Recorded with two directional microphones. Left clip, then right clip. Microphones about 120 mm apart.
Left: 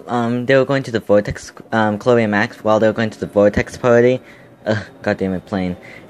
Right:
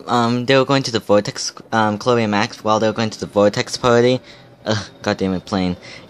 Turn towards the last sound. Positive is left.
turn(degrees=-20)  # may be behind; listen again after turning